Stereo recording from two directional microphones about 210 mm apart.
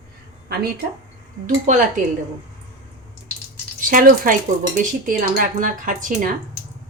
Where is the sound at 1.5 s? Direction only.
35° right (ahead or behind).